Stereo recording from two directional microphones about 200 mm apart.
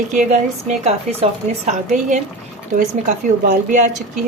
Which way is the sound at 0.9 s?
30° right (ahead or behind).